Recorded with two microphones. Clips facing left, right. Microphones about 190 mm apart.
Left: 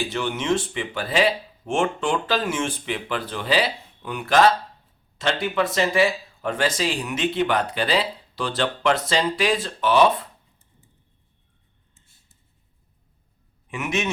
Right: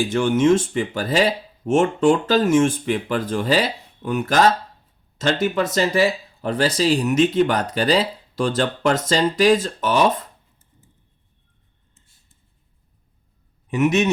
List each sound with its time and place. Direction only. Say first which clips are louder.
0.1 s speech: right 8 dB; 45° right (ahead or behind)
13.7 s a man's voice: right 8 dB; 40° right (ahead or behind)